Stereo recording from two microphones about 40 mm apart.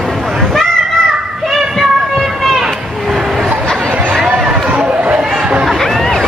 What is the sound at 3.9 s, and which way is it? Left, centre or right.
Chatter, right.